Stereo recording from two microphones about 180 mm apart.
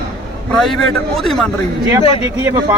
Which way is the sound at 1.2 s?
5° left (ahead or behind).